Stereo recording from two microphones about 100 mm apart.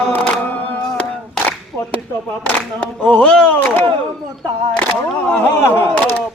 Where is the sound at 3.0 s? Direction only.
10° left (ahead or behind).